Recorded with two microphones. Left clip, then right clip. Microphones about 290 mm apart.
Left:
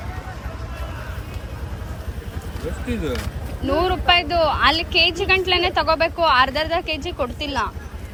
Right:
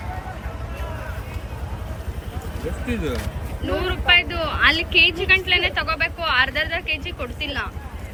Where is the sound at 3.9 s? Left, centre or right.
Centre.